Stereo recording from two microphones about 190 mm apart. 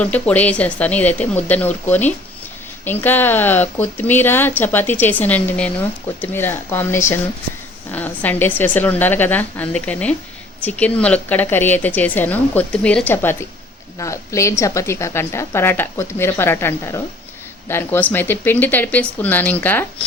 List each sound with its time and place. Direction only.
0.0 s speech: 10° left (ahead or behind)